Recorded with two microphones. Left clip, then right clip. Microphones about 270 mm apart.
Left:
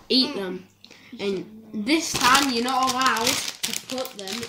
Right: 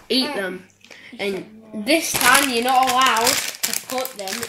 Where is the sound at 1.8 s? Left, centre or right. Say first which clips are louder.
Right 4 dB; centre.